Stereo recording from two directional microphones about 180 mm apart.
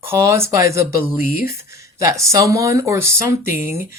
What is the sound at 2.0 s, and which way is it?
Speech, 15° right (ahead or behind).